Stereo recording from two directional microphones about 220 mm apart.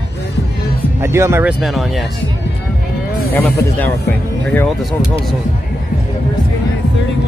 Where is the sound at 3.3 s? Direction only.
10° left (ahead or behind).